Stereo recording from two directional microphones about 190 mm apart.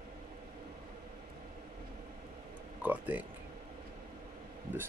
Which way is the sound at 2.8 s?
10° right (ahead or behind).